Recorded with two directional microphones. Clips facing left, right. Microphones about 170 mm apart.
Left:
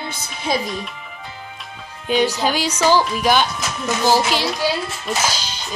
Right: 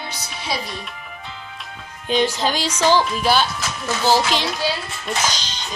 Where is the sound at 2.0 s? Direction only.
10° left (ahead or behind).